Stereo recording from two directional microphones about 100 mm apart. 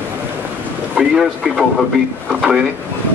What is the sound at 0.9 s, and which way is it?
Speech, 5° right (ahead or behind).